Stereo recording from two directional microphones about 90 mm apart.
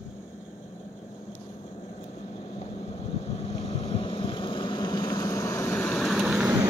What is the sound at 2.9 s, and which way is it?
Vehicle, 90° left.